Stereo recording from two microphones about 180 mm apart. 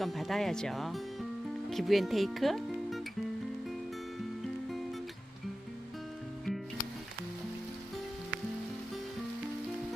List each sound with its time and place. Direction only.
0.0 s speech: centre (ahead or behind)